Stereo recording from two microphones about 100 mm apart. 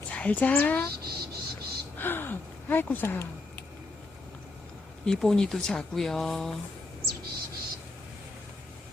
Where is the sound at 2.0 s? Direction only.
20° left (ahead or behind).